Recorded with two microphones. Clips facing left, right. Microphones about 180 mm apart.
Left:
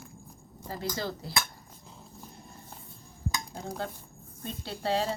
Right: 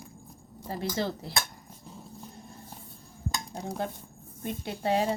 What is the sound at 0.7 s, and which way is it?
Speech, 25° right (ahead or behind).